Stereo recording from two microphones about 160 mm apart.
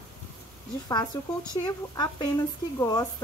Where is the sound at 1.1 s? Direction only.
20° left (ahead or behind).